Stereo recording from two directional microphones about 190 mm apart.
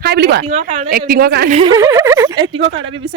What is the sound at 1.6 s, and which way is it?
Speech, 15° right (ahead or behind).